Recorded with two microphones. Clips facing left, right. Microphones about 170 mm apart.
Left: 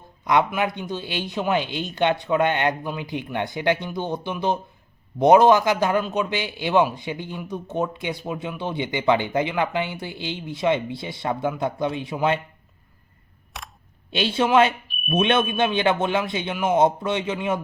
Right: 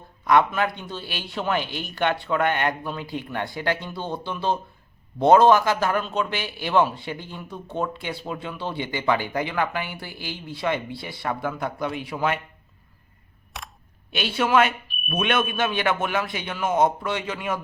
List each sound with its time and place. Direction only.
0.3 s a man's voice: 15° left (ahead or behind)
13.5 s camera: centre (ahead or behind)
14.1 s a man's voice: 25° left (ahead or behind)